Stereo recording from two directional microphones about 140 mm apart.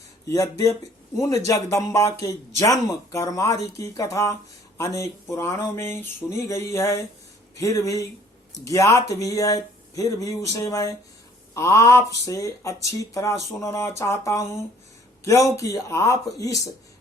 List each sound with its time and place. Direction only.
0.3 s speech: 20° left (ahead or behind)